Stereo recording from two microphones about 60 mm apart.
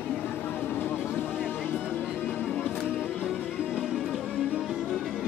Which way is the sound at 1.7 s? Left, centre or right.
Left.